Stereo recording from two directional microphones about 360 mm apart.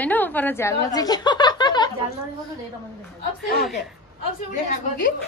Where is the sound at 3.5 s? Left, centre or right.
Left.